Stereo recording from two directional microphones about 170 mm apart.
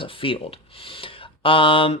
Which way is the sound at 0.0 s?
30° left (ahead or behind).